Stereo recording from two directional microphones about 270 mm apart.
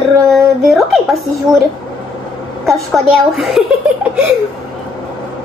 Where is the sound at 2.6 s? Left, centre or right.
Centre.